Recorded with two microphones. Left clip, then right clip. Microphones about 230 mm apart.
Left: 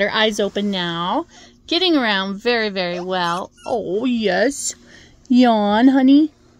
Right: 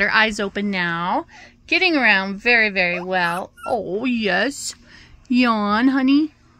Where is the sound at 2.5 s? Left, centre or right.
Centre.